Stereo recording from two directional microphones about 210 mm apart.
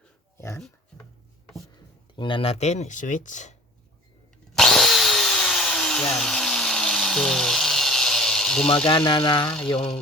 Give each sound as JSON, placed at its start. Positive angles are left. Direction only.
{"t": 0.3, "sound": "speech", "side_deg": 10}
{"t": 2.1, "sound": "speech", "side_deg": 25}
{"t": 4.5, "sound": "drill", "side_deg": 0}
{"t": 8.9, "sound": "speech", "side_deg": 20}